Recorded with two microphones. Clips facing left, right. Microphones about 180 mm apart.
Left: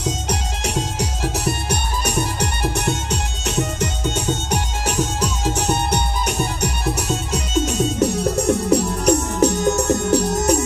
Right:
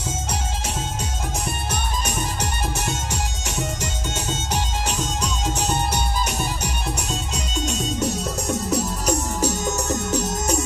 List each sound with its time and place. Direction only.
0.0 s music: 75° left (ahead or behind)